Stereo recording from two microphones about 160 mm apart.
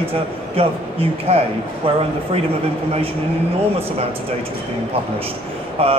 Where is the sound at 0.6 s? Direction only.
35° right (ahead or behind).